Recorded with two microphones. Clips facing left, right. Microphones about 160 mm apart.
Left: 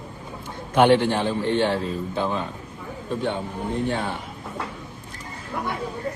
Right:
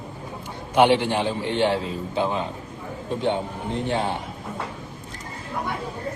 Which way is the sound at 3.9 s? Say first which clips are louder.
Right 2 dB; 15° right (ahead or behind).